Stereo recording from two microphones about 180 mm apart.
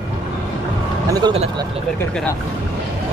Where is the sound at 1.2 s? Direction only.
30° right (ahead or behind).